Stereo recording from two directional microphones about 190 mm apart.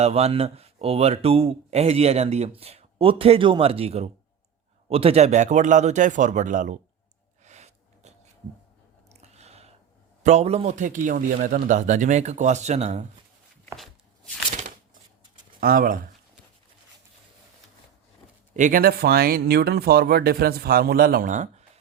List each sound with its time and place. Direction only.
0.0 s speech: 35° right (ahead or behind)
7.4 s gasp: 35° right (ahead or behind)
9.2 s a sound: 35° right (ahead or behind)
10.2 s speech: 35° right (ahead or behind)
13.7 s a sound: 5° left (ahead or behind)
15.6 s speech: 50° right (ahead or behind)
18.5 s speech: 45° right (ahead or behind)